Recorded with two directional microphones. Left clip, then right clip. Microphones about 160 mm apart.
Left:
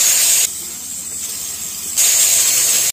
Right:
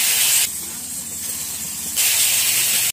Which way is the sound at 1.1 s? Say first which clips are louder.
Left 3 dB; 20° left (ahead or behind).